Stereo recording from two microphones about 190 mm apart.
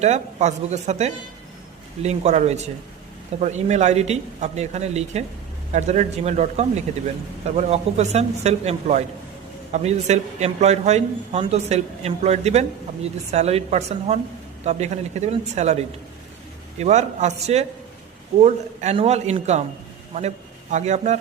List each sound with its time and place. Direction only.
0.0 s a man's voice: 35° right (ahead or behind)
16.8 s a man's voice: 35° right (ahead or behind)